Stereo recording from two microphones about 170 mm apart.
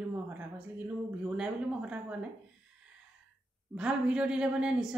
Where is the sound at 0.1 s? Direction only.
10° right (ahead or behind).